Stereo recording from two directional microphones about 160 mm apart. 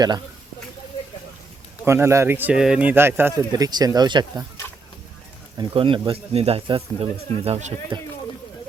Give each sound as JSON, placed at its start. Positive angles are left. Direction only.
{"t": 1.8, "sound": "speech", "side_deg": -15}
{"t": 3.7, "sound": "speech", "side_deg": -25}
{"t": 5.5, "sound": "speech", "side_deg": -30}